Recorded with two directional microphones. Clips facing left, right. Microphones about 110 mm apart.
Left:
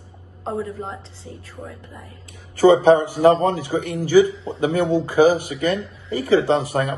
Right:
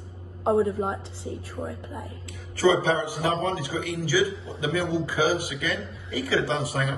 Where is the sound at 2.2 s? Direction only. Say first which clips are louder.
Left 8 dB; 45° left (ahead or behind).